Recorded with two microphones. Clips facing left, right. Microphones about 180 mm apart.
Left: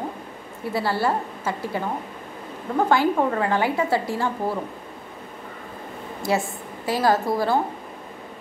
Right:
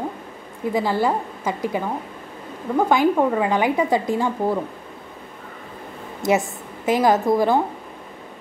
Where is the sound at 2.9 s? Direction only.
15° right (ahead or behind).